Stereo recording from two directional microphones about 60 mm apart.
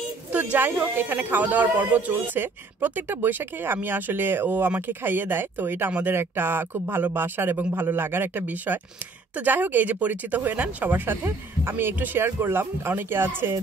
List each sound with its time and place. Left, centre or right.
0.3 s speech: right